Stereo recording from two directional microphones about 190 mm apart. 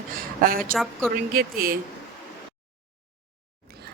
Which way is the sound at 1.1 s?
50° right (ahead or behind).